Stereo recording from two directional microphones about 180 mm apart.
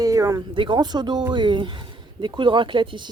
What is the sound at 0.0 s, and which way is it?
Speech, 20° right (ahead or behind).